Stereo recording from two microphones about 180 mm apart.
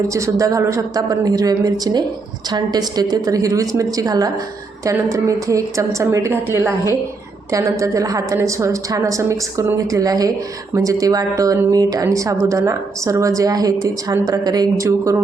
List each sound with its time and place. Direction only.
0.1 s a woman's voice: 15° right (ahead or behind)